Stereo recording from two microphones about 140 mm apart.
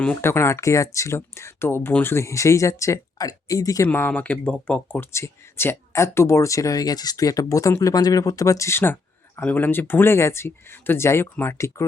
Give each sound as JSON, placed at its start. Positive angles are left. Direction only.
{"t": 0.0, "sound": "speech", "side_deg": 5}
{"t": 0.3, "sound": "speech", "side_deg": 20}
{"t": 3.8, "sound": "speech", "side_deg": 10}